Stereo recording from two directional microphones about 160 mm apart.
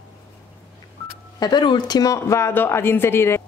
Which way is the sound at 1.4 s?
25° left (ahead or behind).